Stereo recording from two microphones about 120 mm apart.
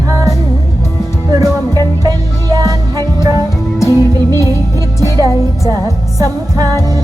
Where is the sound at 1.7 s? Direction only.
30° right (ahead or behind).